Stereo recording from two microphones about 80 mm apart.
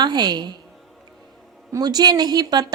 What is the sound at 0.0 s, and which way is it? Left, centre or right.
Speech, right.